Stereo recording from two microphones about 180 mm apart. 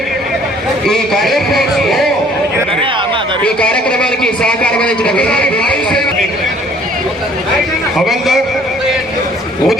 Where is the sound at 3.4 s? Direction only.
5° left (ahead or behind).